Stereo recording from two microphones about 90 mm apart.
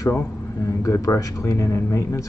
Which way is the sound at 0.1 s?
35° left (ahead or behind).